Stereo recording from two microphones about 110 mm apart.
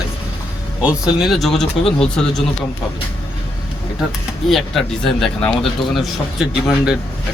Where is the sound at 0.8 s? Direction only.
10° right (ahead or behind).